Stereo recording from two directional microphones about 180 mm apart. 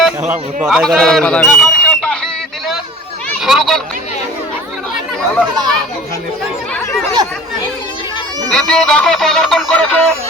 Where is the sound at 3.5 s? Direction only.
Centre (ahead or behind).